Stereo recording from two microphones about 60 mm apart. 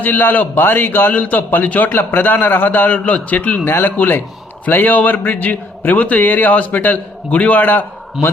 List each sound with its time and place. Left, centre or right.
0.0 s a man's voice: left